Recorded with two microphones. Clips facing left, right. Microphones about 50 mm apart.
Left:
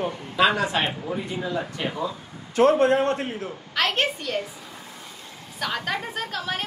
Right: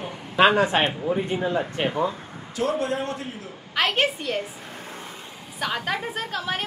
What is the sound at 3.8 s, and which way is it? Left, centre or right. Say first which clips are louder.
Speech: right 1 dB; centre.